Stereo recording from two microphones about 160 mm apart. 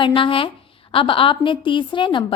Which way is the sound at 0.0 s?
35° left (ahead or behind).